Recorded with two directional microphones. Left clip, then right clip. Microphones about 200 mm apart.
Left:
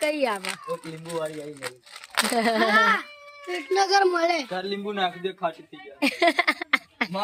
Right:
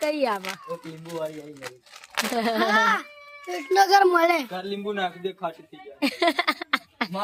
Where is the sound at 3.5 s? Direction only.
55° right (ahead or behind).